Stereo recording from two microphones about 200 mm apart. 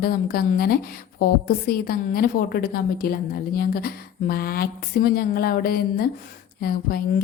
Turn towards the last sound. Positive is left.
turn(degrees=50)  # may be behind; listen again after turning